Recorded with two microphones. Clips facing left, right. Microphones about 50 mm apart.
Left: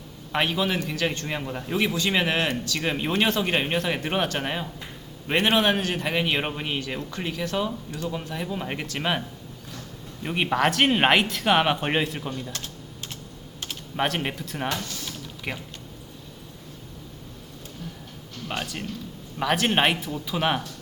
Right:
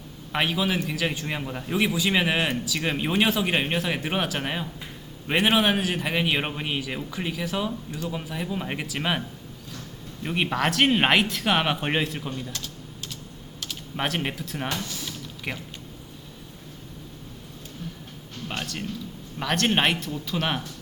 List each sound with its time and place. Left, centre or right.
0.3 s speech: centre
10.2 s speech: centre
12.5 s typing: left
13.9 s speech: centre
18.4 s speech: centre